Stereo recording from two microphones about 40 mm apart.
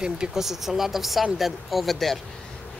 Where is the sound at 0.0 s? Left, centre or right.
Centre.